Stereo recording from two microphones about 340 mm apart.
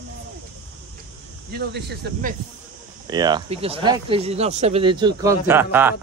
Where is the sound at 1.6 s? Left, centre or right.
Right.